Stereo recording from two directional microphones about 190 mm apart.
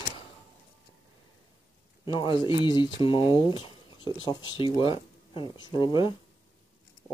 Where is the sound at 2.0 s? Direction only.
25° left (ahead or behind).